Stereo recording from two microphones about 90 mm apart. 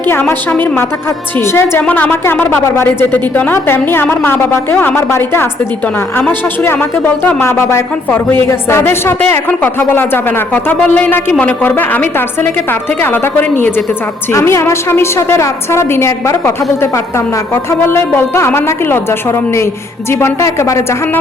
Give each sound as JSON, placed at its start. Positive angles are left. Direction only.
{"t": 0.1, "sound": "a woman's voice", "side_deg": 25}
{"t": 1.8, "sound": "a woman's voice", "side_deg": 15}